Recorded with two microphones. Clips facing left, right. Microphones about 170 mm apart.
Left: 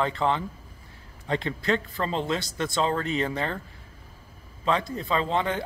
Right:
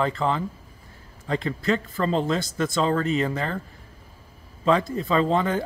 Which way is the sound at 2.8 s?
40° right (ahead or behind).